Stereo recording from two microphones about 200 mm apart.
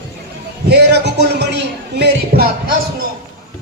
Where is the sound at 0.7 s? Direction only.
55° right (ahead or behind).